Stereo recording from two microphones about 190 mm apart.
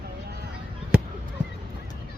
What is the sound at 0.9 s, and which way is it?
Fireworks, 5° right (ahead or behind).